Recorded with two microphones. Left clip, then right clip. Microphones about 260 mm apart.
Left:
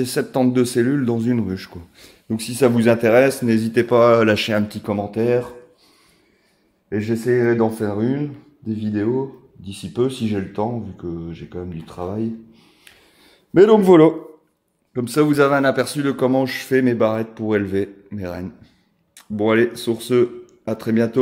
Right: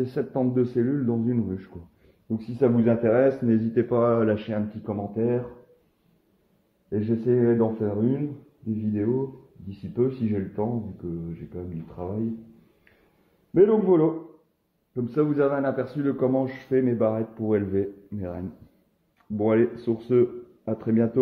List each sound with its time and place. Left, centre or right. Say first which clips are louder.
0.0 s speech: left 7 dB; left
6.9 s speech: left 4 dB; left
9.9 s speech: left 4 dB; left
12.0 s speech: left 6 dB; left
13.5 s speech: left 8 dB; left